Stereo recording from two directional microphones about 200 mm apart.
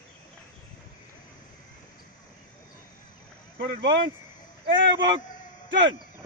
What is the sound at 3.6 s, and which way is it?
Speech, 55° right (ahead or behind).